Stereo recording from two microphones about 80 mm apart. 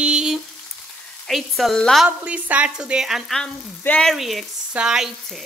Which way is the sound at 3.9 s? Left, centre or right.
Left.